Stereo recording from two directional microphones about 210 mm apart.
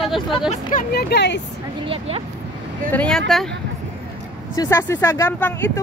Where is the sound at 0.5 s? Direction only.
40° left (ahead or behind).